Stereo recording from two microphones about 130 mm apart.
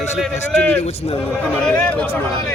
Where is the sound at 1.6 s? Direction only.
10° left (ahead or behind).